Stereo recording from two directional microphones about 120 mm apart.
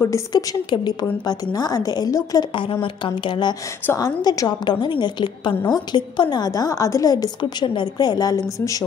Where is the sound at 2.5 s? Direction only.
45° left (ahead or behind).